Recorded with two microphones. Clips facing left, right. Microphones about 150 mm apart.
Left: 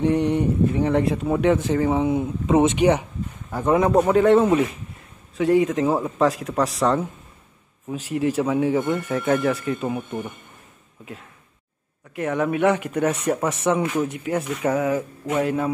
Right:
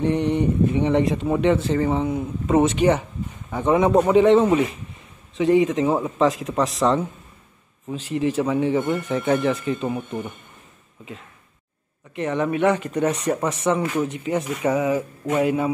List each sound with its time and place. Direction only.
0.0 s speech: 10° left (ahead or behind)
2.0 s speech: 20° left (ahead or behind)
3.4 s speech: centre (ahead or behind)
12.2 s speech: 5° left (ahead or behind)
13.3 s speech: centre (ahead or behind)
13.7 s speech: 10° left (ahead or behind); by 15.7 s 5° right (ahead or behind)